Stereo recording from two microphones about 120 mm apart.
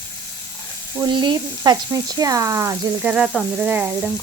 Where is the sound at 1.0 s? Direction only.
40° right (ahead or behind).